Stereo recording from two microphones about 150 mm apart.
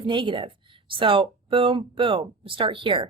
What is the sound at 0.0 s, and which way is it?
A woman's voice, 35° right (ahead or behind).